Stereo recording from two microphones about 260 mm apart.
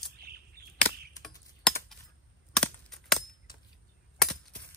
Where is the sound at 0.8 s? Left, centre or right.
Centre.